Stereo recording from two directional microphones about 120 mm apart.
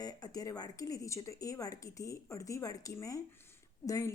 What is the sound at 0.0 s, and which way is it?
Speech, 30° left (ahead or behind).